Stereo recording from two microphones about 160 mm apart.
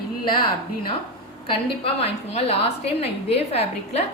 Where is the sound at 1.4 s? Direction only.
35° left (ahead or behind).